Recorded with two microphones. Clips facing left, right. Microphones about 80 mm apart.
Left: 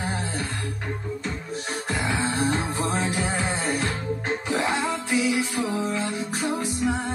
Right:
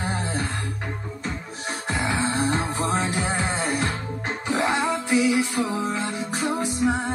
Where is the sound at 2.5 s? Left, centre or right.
Centre.